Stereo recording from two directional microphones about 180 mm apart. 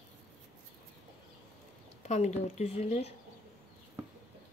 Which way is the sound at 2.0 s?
40° left (ahead or behind).